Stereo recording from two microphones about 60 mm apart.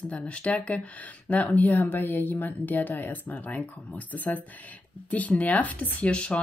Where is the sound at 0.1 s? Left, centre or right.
Left.